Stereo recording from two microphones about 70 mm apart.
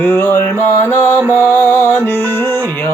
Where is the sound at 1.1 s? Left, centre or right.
Right.